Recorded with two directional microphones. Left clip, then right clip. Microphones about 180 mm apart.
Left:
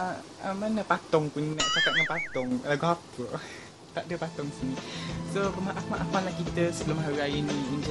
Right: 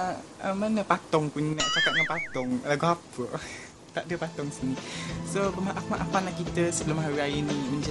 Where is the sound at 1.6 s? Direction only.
Centre (ahead or behind).